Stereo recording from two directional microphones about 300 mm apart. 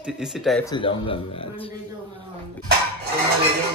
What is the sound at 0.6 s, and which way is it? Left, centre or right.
Speech, centre.